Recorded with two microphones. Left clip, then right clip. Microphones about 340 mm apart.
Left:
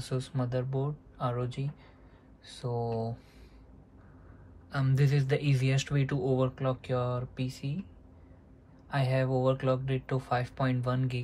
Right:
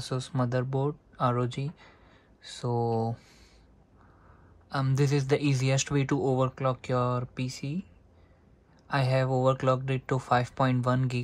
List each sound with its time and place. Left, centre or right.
0.0 s speech: centre
2.7 s a sound: right
4.6 s speech: centre
8.8 s speech: right